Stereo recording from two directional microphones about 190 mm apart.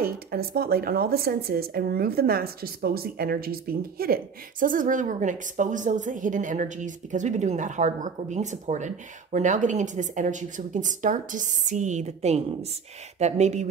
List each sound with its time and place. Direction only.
0.0 s speech: 55° right (ahead or behind); by 13.7 s 35° right (ahead or behind)